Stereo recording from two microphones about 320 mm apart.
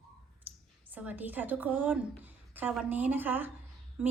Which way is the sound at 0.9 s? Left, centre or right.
Centre.